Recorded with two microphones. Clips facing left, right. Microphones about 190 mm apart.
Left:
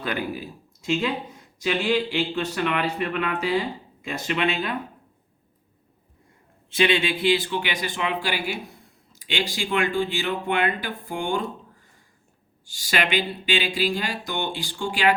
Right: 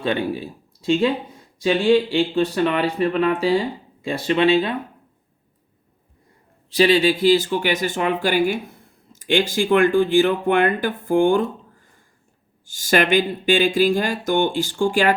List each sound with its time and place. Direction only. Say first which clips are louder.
0.0 s speech: right 6 dB; 25° right (ahead or behind)
6.7 s speech: right 6 dB; 35° right (ahead or behind)
12.6 s speech: right 8 dB; 50° right (ahead or behind)